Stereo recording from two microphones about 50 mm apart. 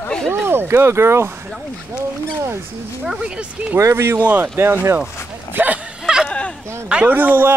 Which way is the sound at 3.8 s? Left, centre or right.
Right.